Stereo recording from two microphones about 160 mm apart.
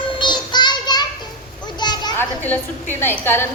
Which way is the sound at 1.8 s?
25° left (ahead or behind).